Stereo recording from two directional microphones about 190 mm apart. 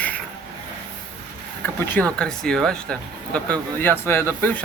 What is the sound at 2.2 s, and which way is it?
Speech, 5° left (ahead or behind).